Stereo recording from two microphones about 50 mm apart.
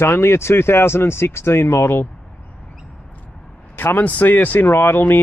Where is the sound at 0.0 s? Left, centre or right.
Left.